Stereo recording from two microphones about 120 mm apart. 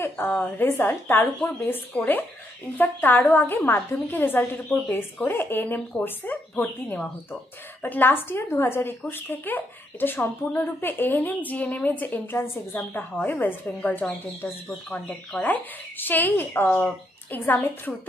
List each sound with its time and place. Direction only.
0.0 s a woman's voice: 15° left (ahead or behind)